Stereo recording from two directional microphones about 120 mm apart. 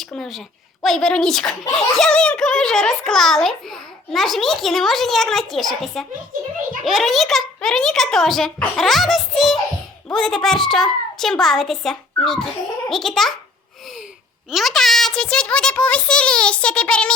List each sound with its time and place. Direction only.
0.0 s a child's voice: 5° left (ahead or behind)
14.5 s a child's voice: centre (ahead or behind)